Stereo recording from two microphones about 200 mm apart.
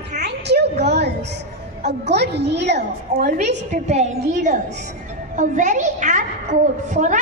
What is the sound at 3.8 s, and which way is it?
A woman's voice, 35° right (ahead or behind).